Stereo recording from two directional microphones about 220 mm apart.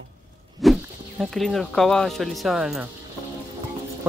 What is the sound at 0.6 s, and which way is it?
Sheep, centre (ahead or behind).